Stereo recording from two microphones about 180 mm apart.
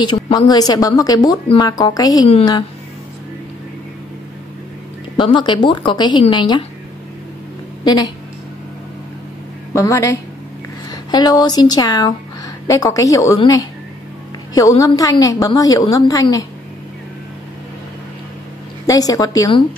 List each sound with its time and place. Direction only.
0.0 s a woman's voice: 25° left (ahead or behind)
5.1 s a woman's voice: 25° left (ahead or behind)
7.8 s a woman's voice: 20° left (ahead or behind)
9.8 s a woman's voice: 15° left (ahead or behind)
18.9 s a woman's voice: 20° left (ahead or behind)